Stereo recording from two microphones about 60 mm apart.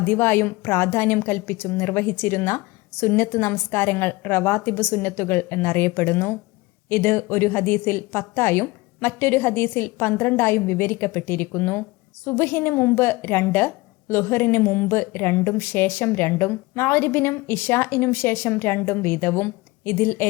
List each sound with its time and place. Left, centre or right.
0.0 s a woman's voice: left